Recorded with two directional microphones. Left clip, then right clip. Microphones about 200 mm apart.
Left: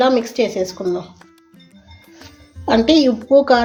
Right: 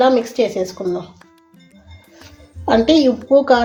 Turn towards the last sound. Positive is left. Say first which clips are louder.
# even
turn(degrees=5)  # may be behind; listen again after turning